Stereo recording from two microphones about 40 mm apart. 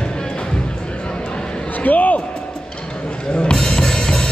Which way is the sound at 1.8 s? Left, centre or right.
Left.